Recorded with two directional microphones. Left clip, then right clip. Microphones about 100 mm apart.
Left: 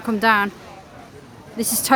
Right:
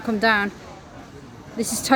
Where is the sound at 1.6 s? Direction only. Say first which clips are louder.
Left 2 dB; 20° left (ahead or behind).